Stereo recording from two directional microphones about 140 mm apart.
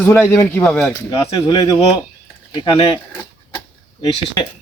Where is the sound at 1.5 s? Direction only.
25° left (ahead or behind).